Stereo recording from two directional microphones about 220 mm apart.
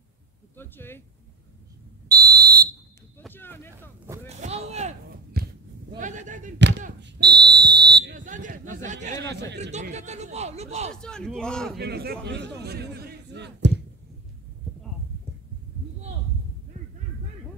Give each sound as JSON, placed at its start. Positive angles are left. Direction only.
{"t": 0.6, "sound": "speech", "side_deg": 10}
{"t": 2.0, "sound": "fire alarm", "side_deg": -45}
{"t": 3.2, "sound": "a sound", "side_deg": 10}
{"t": 4.3, "sound": "a sound", "side_deg": -30}
{"t": 5.4, "sound": "a sound", "side_deg": -45}
{"t": 5.9, "sound": "a man's voice", "side_deg": -35}
{"t": 7.0, "sound": "speech", "side_deg": -50}
{"t": 9.2, "sound": "a man's voice", "side_deg": -50}
{"t": 9.6, "sound": "a man's voice", "side_deg": -30}
{"t": 10.9, "sound": "a man's voice", "side_deg": 5}
{"t": 11.8, "sound": "a man's voice", "side_deg": -45}